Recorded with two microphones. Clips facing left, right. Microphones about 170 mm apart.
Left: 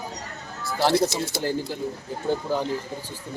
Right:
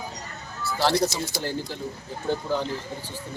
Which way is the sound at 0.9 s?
Centre (ahead or behind).